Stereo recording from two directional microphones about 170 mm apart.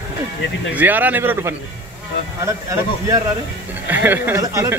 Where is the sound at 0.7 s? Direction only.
10° right (ahead or behind).